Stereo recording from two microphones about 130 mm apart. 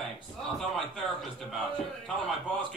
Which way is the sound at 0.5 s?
Centre (ahead or behind).